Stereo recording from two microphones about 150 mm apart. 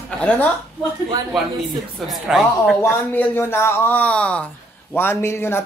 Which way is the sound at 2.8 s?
15° left (ahead or behind).